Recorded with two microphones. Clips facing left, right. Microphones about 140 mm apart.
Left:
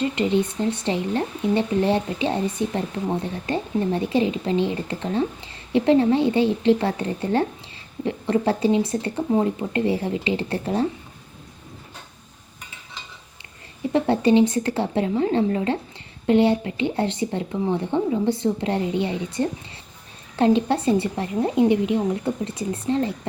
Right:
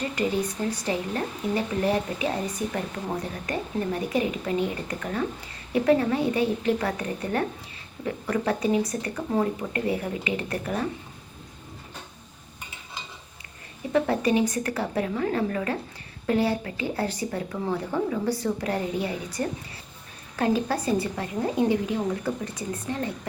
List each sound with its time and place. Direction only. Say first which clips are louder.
0.0 s speech: left 5 dB; 25° left (ahead or behind)
13.9 s speech: left 5 dB; 30° left (ahead or behind)